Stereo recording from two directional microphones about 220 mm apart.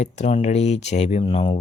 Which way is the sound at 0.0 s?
30° left (ahead or behind).